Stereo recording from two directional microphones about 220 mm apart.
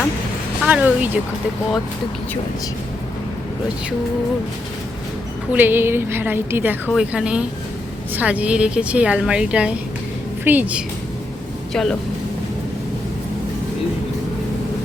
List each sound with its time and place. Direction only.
0.6 s a woman's voice: 5° right (ahead or behind)
5.5 s a woman's voice: 10° right (ahead or behind)